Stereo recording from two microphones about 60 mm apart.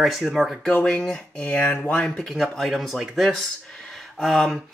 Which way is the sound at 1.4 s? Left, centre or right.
Left.